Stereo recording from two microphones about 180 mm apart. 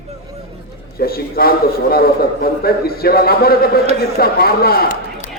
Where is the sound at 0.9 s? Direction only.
55° left (ahead or behind).